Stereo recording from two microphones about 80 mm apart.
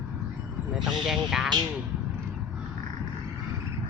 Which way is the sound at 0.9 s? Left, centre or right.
Centre.